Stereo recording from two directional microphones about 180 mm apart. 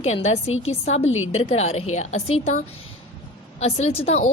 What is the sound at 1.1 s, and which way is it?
Speech, 90° left.